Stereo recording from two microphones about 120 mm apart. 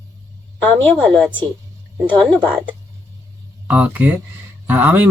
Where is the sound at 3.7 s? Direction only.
15° right (ahead or behind).